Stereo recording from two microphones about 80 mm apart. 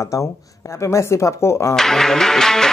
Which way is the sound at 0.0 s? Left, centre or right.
Left.